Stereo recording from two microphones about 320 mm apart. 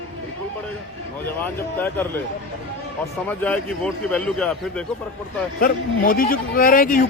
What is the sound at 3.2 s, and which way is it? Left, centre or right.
Speech, centre.